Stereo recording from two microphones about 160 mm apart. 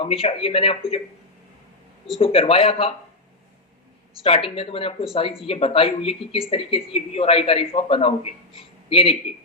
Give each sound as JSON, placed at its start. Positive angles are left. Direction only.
{"t": 0.0, "sound": "a man's voice", "side_deg": 35}
{"t": 2.1, "sound": "a man's voice", "side_deg": 35}
{"t": 4.2, "sound": "a man's voice", "side_deg": 35}